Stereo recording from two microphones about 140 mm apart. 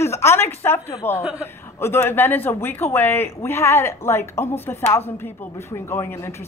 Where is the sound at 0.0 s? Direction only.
20° left (ahead or behind).